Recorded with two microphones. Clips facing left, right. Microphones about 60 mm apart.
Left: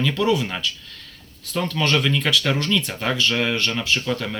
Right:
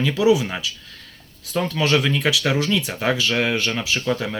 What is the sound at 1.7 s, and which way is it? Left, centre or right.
Speech, centre.